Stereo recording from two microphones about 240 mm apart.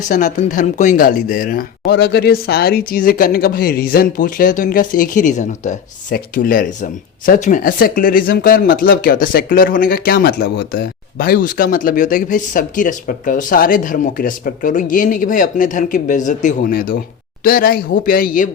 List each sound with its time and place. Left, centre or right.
0.1 s speech: left